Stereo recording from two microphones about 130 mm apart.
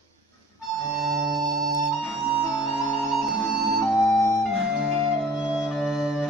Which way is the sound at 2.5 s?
25° left (ahead or behind).